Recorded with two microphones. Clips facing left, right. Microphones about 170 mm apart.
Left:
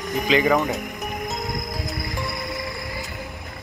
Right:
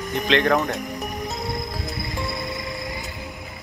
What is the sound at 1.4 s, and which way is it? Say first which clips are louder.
Music: even; 30° right (ahead or behind).